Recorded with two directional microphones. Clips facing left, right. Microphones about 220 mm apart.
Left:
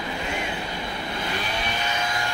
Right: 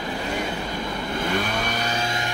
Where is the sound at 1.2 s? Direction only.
50° right (ahead or behind); by 2.3 s 25° right (ahead or behind).